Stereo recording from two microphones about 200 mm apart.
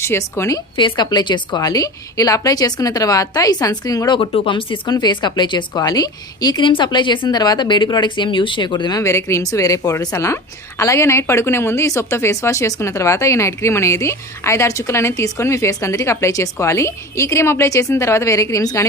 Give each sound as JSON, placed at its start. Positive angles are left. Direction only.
{"t": 0.0, "sound": "a woman's voice", "side_deg": 15}